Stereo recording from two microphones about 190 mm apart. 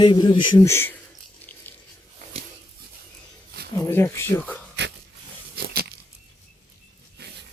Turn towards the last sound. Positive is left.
turn(degrees=-60)  # may be behind; listen again after turning